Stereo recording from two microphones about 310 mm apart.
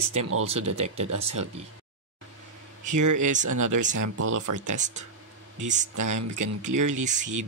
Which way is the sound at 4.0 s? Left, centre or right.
Right.